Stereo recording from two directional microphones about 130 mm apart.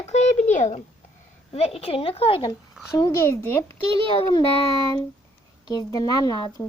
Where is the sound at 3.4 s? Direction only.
15° left (ahead or behind).